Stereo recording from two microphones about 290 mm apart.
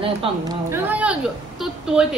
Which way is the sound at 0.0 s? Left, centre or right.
Centre.